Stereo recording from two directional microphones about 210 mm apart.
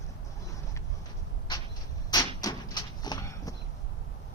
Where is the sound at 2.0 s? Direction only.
15° left (ahead or behind).